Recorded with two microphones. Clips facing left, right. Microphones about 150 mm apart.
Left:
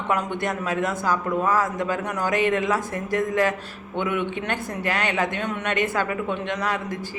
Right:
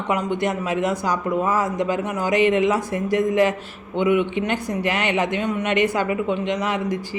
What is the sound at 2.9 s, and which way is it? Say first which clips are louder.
Speech: right 4 dB; 45° left (ahead or behind).